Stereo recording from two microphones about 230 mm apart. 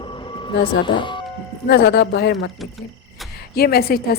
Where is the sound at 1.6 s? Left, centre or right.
Left.